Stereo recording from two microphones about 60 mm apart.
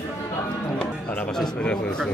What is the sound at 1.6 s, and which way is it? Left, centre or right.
Speech, centre.